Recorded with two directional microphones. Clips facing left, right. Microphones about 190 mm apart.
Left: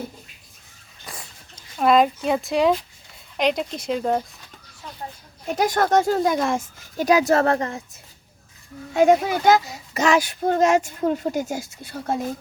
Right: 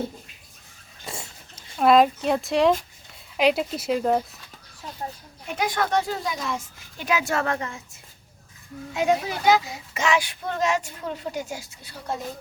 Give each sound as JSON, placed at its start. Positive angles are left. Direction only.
{"t": 1.0, "sound": "a sound", "side_deg": -25}
{"t": 1.5, "sound": "speech", "side_deg": 0}
{"t": 5.5, "sound": "a child's voice", "side_deg": 40}
{"t": 8.9, "sound": "a child's voice", "side_deg": 50}